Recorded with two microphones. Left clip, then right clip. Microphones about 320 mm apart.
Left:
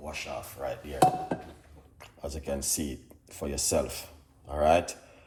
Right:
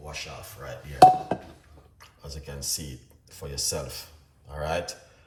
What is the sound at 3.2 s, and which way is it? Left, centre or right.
Speech, centre.